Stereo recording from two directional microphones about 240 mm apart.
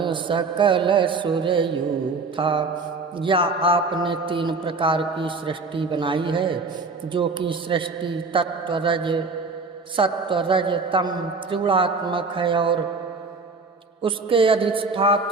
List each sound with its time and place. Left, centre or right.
0.0 s speech: centre
14.0 s speech: right